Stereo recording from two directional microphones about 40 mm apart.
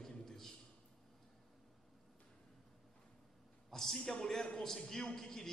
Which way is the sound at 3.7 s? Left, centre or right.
Centre.